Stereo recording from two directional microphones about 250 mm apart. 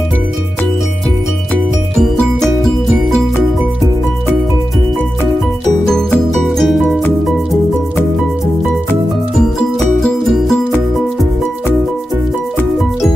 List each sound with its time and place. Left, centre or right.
1.5 s music: centre
5.9 s music: centre
9.6 s music: centre